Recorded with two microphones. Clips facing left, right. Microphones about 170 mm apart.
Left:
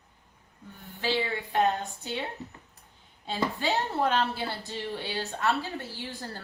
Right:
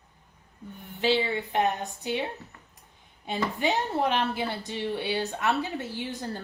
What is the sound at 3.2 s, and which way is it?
A woman's voice, 15° right (ahead or behind).